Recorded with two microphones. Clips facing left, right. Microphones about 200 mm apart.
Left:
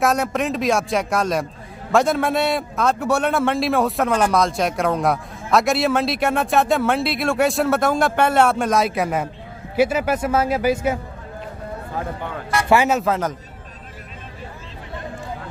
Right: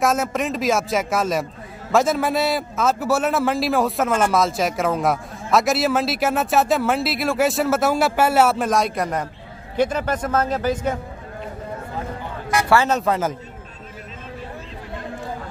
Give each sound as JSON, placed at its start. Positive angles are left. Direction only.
{"t": 0.0, "sound": "a man's voice", "side_deg": 0}
{"t": 12.6, "sound": "a man's voice", "side_deg": 15}
{"t": 13.0, "sound": "a man's voice", "side_deg": 0}